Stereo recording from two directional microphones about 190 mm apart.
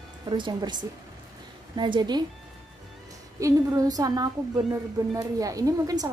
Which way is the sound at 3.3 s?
15° right (ahead or behind).